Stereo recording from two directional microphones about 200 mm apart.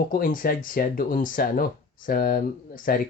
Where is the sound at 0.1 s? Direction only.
45° left (ahead or behind).